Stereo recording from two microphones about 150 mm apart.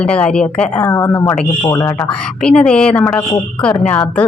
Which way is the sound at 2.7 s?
5° left (ahead or behind).